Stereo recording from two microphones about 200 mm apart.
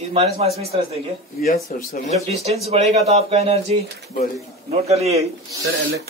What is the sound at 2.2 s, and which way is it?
Speech, 30° right (ahead or behind).